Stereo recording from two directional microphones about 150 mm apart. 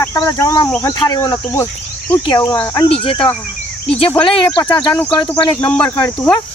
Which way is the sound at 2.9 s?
35° left (ahead or behind).